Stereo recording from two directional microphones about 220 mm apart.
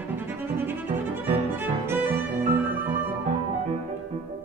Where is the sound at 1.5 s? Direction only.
10° right (ahead or behind).